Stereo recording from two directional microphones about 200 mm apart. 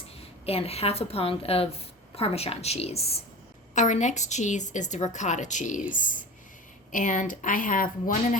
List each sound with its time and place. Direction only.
0.2 s a woman's voice: 30° left (ahead or behind)